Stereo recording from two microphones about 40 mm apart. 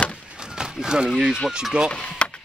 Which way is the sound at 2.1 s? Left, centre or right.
Left.